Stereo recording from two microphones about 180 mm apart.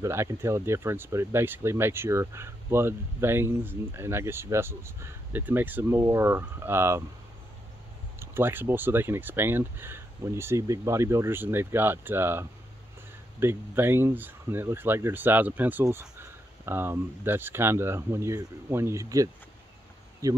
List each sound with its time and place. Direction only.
0.0 s speech: 15° right (ahead or behind)
8.2 s speech: 10° right (ahead or behind)